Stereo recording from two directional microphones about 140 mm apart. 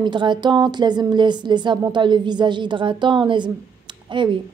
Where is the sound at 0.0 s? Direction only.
35° right (ahead or behind).